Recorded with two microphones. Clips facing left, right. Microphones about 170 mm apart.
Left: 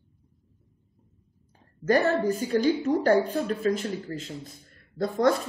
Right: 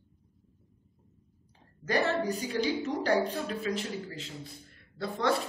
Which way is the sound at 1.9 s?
45° left (ahead or behind).